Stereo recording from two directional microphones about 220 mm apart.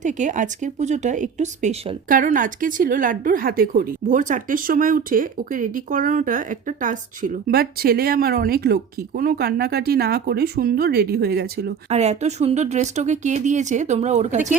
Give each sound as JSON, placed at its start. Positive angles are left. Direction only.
{"t": 0.0, "sound": "speech", "side_deg": -35}
{"t": 11.9, "sound": "speech", "side_deg": -30}